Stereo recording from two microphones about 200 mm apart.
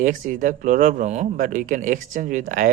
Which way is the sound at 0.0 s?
40° right (ahead or behind).